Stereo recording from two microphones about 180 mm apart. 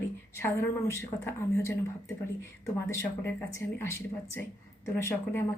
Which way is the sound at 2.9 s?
15° left (ahead or behind).